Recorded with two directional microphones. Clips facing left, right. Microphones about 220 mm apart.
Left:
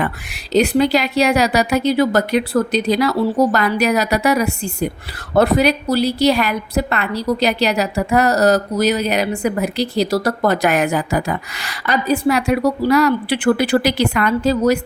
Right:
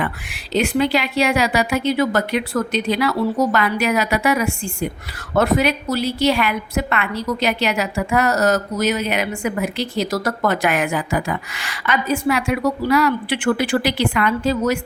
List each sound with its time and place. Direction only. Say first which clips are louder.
0.0 s a woman's voice: left 3 dB; 40° left (ahead or behind)